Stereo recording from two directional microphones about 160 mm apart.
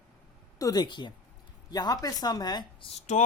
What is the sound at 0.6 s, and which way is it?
Speech, 25° left (ahead or behind).